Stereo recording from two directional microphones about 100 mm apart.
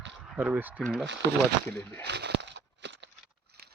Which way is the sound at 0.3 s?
15° right (ahead or behind).